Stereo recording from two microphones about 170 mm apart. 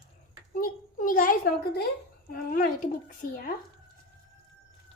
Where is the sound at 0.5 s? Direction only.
55° left (ahead or behind).